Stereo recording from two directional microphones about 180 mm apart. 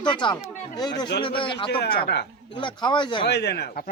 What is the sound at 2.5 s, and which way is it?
Speech, 25° left (ahead or behind).